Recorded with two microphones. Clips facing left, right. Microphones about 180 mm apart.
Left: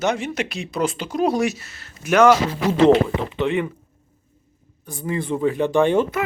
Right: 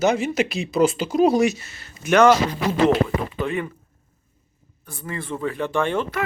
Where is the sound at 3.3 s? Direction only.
20° left (ahead or behind).